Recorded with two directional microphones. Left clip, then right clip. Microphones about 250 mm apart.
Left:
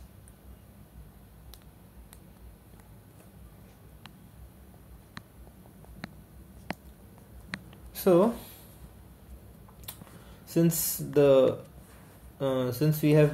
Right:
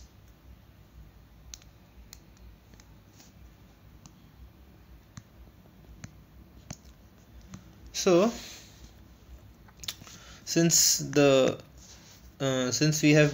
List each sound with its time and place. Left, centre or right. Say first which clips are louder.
7.9 s speech: left 1 dB; centre
9.8 s chewing: right 10 dB; centre
10.4 s speech: right 4 dB; centre